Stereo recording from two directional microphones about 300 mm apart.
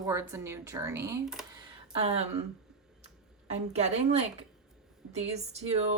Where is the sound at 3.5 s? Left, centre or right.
Right.